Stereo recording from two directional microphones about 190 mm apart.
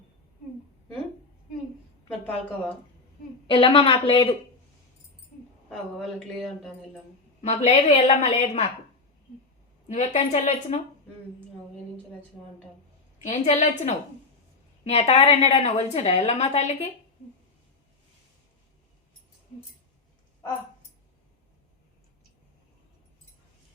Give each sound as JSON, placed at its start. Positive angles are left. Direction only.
{"t": 2.0, "sound": "a woman's voice", "side_deg": 5}
{"t": 3.4, "sound": "speech", "side_deg": 25}
{"t": 5.6, "sound": "a woman's voice", "side_deg": 0}
{"t": 7.4, "sound": "a woman's voice", "side_deg": 35}
{"t": 9.9, "sound": "a woman's voice", "side_deg": 35}
{"t": 13.2, "sound": "a woman's voice", "side_deg": 35}